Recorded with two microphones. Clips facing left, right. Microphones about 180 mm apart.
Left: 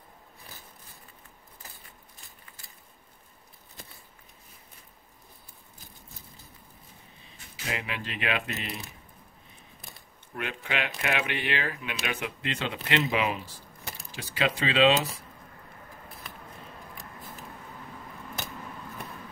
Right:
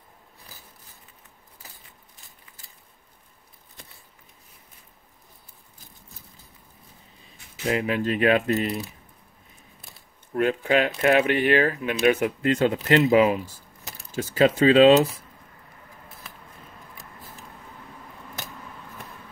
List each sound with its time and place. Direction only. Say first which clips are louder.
7.7 s speech: right 11 dB; 40° right (ahead or behind)
10.3 s speech: right 12 dB; 40° right (ahead or behind)